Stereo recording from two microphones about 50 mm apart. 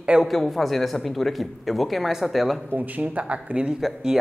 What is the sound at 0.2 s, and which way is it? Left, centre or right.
Speech, centre.